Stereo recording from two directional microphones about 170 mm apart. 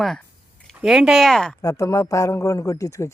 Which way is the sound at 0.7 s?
5° right (ahead or behind).